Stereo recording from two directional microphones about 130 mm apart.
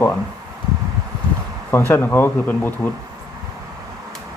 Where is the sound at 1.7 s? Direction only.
15° left (ahead or behind).